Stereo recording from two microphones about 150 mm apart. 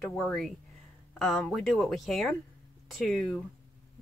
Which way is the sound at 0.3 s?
5° left (ahead or behind).